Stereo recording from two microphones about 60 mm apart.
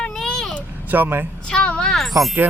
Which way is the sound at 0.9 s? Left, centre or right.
Right.